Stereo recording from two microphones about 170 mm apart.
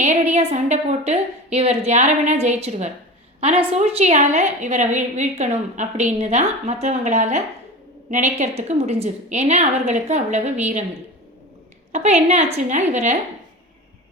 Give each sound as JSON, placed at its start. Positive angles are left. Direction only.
{"t": 0.0, "sound": "a woman's voice", "side_deg": -40}
{"t": 11.9, "sound": "a woman's voice", "side_deg": -45}